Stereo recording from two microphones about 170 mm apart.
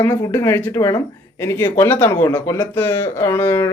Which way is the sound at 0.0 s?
15° left (ahead or behind).